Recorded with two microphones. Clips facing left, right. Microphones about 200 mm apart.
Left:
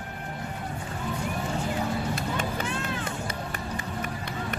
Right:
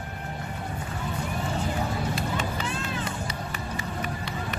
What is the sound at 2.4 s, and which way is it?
Run, 50° left (ahead or behind).